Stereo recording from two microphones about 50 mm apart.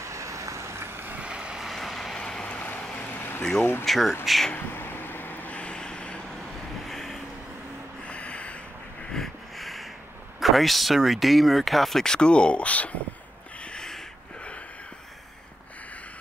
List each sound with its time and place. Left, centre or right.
0.0 s vehicle: right
1.1 s vehicle: right
1.6 s vehicle: centre
2.1 s vehicle: centre
2.5 s vehicle: left
3.0 s a sound: left
3.8 s speech: centre
4.6 s a sound: left
5.6 s vehicle: centre
6.9 s vehicle: centre
8.0 s music: left
9.1 s a sound: centre
10.4 s speech: centre; by 12.9 s left
13.6 s a sound: centre